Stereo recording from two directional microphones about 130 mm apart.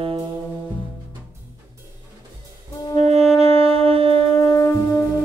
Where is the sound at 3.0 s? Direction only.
55° right (ahead or behind).